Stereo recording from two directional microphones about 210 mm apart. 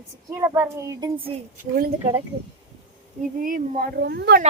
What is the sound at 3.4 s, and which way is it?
Speech, 40° right (ahead or behind).